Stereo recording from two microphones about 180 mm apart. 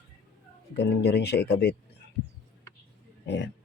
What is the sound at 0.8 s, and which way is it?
Speech, 70° left (ahead or behind).